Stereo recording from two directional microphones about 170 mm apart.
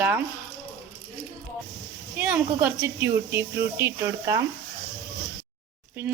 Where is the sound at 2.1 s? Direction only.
10° right (ahead or behind).